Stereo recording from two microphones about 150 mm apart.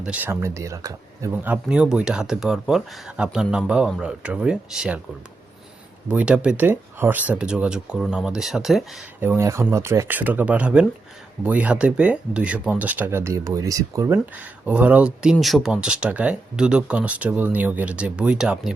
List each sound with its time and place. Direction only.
0.0 s speech: 10° right (ahead or behind)
1.6 s speech: 5° right (ahead or behind)
6.1 s speech: 10° right (ahead or behind)
9.2 s speech: 15° right (ahead or behind)
14.3 s speech: 10° right (ahead or behind)